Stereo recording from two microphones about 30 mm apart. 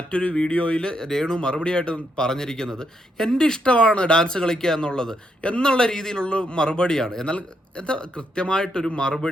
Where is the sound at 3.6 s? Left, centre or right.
Left.